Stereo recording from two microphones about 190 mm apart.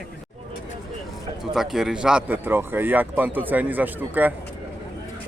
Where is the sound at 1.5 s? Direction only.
Centre (ahead or behind).